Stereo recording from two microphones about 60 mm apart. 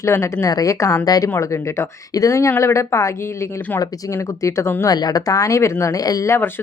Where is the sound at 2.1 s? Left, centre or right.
Left.